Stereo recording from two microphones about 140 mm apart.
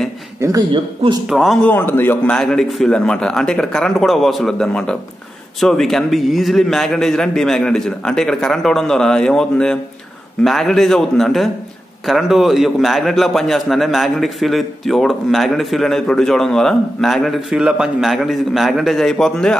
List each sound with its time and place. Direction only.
0.4 s speech: 25° right (ahead or behind)
1.3 s a man's voice: centre (ahead or behind)
1.7 s a man's voice: 15° left (ahead or behind)